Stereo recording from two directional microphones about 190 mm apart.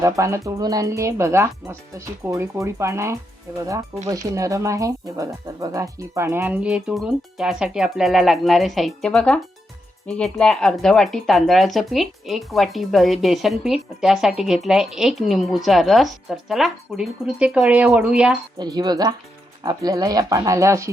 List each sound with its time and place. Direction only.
0.0 s speech: 15° right (ahead or behind)
18.6 s speech: 20° right (ahead or behind)